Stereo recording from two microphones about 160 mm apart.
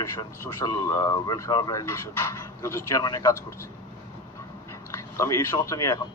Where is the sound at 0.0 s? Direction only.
20° left (ahead or behind).